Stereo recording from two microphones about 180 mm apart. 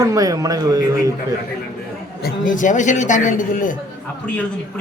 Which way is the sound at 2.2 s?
45° left (ahead or behind).